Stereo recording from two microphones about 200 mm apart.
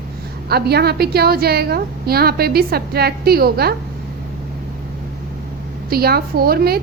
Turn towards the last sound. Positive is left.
turn(degrees=-50)  # may be behind; listen again after turning